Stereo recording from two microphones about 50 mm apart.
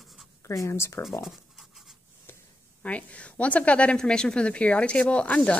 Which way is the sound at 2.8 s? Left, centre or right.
Left.